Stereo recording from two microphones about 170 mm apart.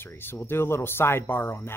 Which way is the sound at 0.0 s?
15° left (ahead or behind).